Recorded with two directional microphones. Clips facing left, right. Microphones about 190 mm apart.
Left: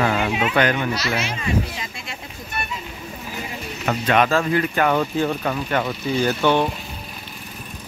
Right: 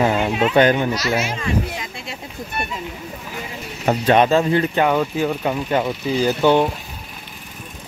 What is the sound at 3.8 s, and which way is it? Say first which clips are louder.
Speech: right 4 dB; 30° right (ahead or behind).